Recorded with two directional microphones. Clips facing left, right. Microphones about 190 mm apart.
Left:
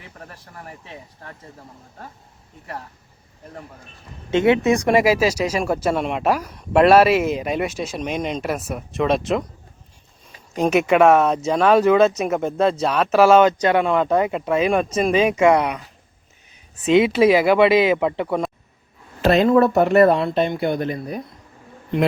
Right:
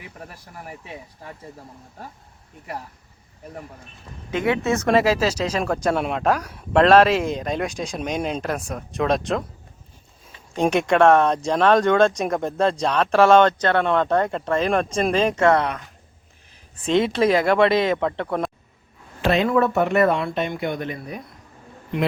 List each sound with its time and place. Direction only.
0.0 s speech: 10° right (ahead or behind)
4.3 s speech: 25° left (ahead or behind); by 9.4 s centre (ahead or behind)
10.6 s speech: 5° left (ahead or behind)
16.8 s speech: 5° left (ahead or behind)
19.2 s speech: 40° left (ahead or behind)